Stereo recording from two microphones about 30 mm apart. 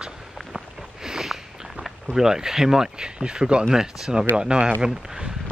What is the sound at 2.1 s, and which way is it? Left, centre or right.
Speech, centre.